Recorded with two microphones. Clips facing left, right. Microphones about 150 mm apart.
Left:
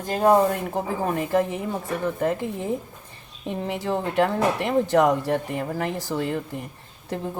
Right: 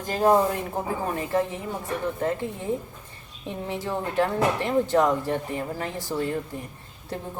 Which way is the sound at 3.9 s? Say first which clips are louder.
Left 3 dB; 65° left (ahead or behind).